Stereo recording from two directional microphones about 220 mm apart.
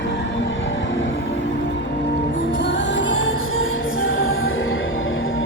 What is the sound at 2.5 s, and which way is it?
Music, 55° left (ahead or behind).